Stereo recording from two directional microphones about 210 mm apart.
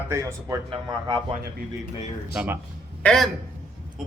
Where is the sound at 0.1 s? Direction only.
15° right (ahead or behind).